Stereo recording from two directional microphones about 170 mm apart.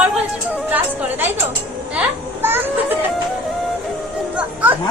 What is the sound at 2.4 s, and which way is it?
Speech, 15° right (ahead or behind).